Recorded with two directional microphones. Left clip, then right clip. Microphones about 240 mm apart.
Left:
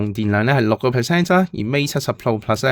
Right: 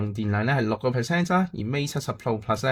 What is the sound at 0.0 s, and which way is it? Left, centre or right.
Speech, left.